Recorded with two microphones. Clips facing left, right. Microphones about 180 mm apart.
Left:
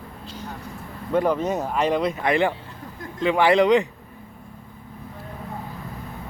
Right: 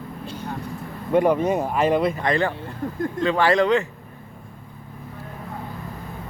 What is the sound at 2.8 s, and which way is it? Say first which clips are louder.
Speech: right 14 dB; 50° right (ahead or behind).